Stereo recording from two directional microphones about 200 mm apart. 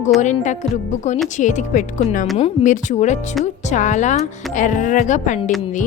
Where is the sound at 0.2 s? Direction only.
35° left (ahead or behind).